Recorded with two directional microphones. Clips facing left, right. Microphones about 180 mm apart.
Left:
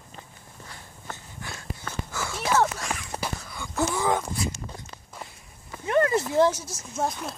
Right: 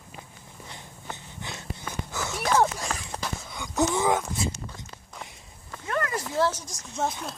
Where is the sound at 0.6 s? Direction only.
20° right (ahead or behind).